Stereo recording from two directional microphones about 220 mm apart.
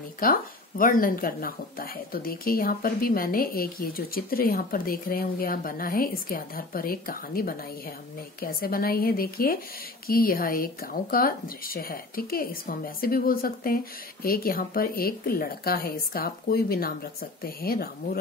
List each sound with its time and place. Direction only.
0.2 s a woman's voice: 40° left (ahead or behind)